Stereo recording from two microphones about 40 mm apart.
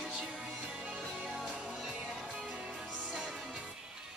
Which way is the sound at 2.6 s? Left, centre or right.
Right.